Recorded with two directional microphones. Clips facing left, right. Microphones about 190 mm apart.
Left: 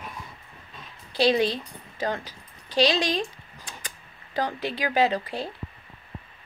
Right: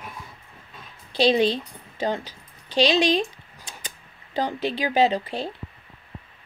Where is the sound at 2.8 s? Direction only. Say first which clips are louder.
Right 3 dB; 25° right (ahead or behind).